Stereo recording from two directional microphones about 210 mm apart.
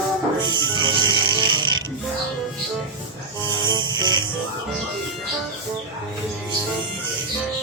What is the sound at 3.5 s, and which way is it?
Music, 20° right (ahead or behind).